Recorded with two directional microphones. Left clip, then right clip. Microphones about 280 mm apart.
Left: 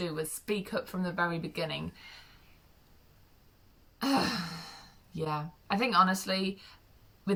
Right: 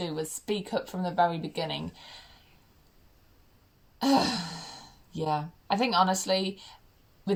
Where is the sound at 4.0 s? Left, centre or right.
Left.